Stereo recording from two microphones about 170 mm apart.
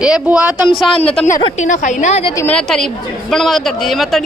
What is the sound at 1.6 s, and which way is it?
Speech, 45° left (ahead or behind).